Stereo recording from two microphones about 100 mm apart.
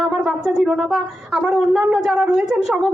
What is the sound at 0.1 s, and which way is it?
Speech, 5° right (ahead or behind).